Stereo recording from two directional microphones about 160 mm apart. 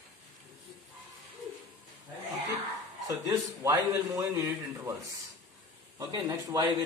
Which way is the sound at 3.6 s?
20° right (ahead or behind).